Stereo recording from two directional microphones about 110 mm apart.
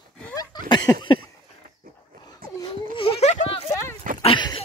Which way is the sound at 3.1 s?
70° left (ahead or behind).